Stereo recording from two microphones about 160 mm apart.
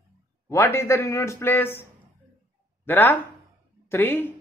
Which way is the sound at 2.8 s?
10° left (ahead or behind).